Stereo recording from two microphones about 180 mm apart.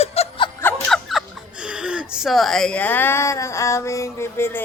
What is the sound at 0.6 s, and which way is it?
Speech, 5° left (ahead or behind).